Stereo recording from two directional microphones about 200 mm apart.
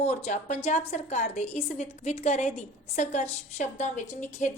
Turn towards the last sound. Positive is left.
turn(degrees=40)  # may be behind; listen again after turning